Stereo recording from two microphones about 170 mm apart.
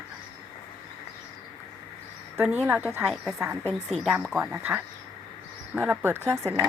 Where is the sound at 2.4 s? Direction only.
10° right (ahead or behind).